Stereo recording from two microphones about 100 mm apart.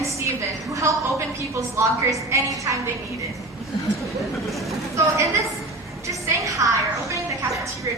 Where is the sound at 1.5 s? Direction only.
30° right (ahead or behind).